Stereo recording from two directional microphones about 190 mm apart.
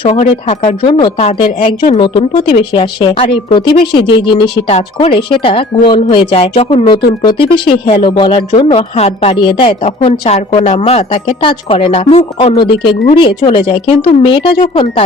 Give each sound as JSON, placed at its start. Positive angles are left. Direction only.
{"t": 0.0, "sound": "a woman's voice", "side_deg": 30}